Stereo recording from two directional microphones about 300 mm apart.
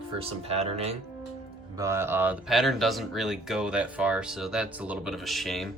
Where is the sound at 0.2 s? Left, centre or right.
Right.